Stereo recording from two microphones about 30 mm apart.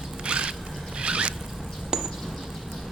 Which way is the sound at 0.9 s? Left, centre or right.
Right.